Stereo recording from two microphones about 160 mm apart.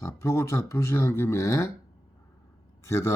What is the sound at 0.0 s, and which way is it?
Speech, 20° left (ahead or behind).